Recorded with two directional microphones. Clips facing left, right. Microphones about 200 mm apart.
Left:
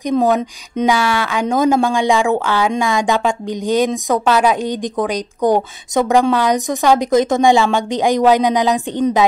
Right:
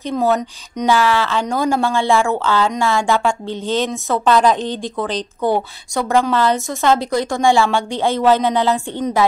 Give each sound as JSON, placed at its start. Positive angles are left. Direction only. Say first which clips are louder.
{"t": 0.0, "sound": "speech", "louder": "left 3 dB", "side_deg": 15}